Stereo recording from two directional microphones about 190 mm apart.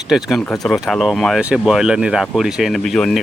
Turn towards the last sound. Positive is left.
turn(degrees=0)  # may be behind; listen again after turning